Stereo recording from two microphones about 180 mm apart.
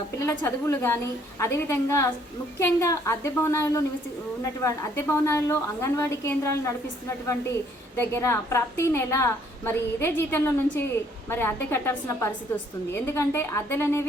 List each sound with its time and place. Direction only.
0.3 s a woman's voice: 15° left (ahead or behind)
7.9 s a woman's voice: 15° left (ahead or behind)